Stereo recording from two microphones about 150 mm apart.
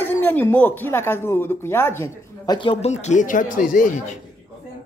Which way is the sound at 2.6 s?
40° left (ahead or behind).